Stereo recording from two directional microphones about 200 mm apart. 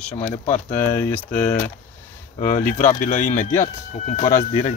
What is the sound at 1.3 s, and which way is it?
Speech, 35° left (ahead or behind).